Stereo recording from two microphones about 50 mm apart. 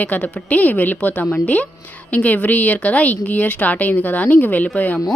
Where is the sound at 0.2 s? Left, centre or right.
Left.